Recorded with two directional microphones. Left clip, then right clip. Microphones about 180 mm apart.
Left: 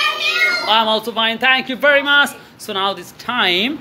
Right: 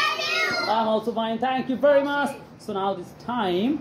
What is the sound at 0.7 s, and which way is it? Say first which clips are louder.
A man's voice: left 7 dB; 25° left (ahead or behind).